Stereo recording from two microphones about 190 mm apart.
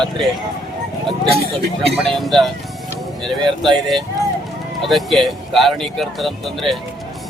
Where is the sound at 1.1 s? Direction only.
30° right (ahead or behind).